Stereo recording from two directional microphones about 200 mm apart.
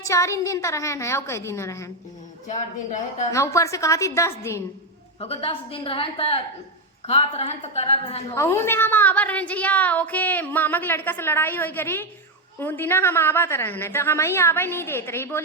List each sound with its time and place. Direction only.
0.0 s a woman's voice: 15° left (ahead or behind)
2.5 s speech: 40° left (ahead or behind)
3.3 s a woman's voice: 15° left (ahead or behind)
5.2 s a woman's voice: 30° left (ahead or behind)
8.4 s a woman's voice: 15° left (ahead or behind)